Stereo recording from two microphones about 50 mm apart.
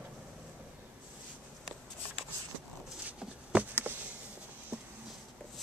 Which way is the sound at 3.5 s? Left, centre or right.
Right.